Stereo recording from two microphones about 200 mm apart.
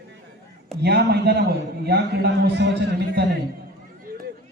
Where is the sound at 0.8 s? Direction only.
55° right (ahead or behind).